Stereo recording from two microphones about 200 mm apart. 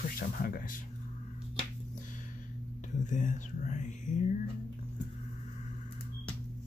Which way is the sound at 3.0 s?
40° left (ahead or behind).